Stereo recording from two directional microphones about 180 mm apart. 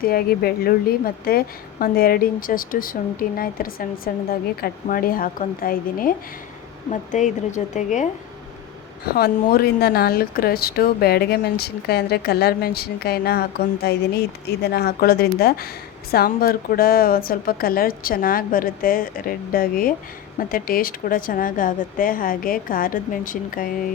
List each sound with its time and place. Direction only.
0.0 s a woman's voice: 55° left (ahead or behind)
9.1 s a woman's voice: 55° left (ahead or behind)